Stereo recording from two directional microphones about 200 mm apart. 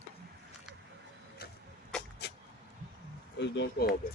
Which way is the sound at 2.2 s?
55° left (ahead or behind).